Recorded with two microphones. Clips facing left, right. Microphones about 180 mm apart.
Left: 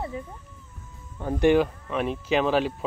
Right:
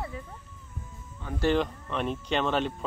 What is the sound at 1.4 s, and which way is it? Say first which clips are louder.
Speech: left 6 dB; 10° left (ahead or behind).